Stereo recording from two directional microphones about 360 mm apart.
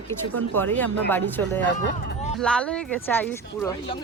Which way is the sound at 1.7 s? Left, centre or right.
Left.